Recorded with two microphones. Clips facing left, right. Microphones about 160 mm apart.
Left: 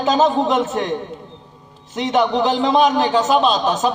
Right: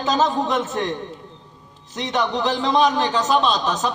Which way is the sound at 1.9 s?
10° left (ahead or behind).